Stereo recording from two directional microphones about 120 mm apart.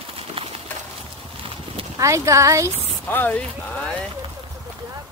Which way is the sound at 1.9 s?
25° right (ahead or behind).